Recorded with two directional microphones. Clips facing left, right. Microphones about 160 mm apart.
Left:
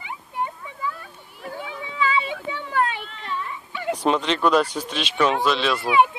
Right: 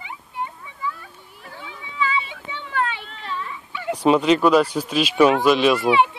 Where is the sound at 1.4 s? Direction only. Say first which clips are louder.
Left 6 dB; 50° left (ahead or behind).